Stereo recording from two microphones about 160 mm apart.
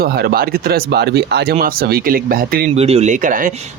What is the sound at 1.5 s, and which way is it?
Speech, 65° right (ahead or behind).